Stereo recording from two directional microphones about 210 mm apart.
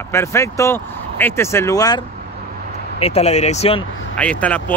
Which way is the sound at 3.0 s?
30° left (ahead or behind).